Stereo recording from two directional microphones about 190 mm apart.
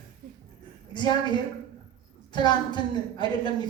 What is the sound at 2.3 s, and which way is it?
Speech, 25° left (ahead or behind).